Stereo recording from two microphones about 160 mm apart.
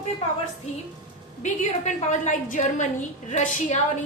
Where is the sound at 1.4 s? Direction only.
50° left (ahead or behind).